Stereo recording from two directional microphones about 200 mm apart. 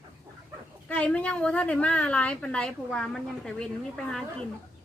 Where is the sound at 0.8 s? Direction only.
5° left (ahead or behind).